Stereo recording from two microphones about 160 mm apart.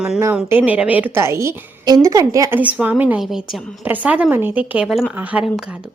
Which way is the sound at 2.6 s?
10° right (ahead or behind).